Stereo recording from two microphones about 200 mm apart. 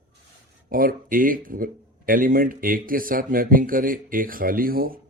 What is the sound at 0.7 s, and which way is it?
A man's voice, 45° right (ahead or behind).